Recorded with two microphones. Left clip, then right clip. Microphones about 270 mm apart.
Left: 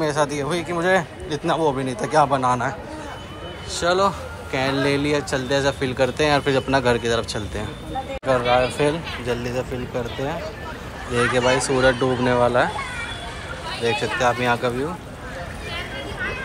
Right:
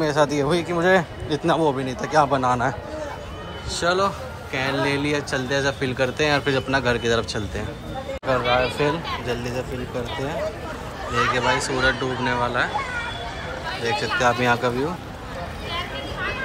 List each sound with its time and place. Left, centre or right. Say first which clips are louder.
0.0 s speech: right 2 dB; centre
3.7 s speech: left 2 dB; centre
8.3 s speech: left 2 dB; centre
11.3 s speech: left 3 dB; centre
14.1 s speech: right 3 dB; centre